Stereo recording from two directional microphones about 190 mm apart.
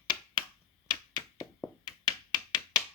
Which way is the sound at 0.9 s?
20° left (ahead or behind).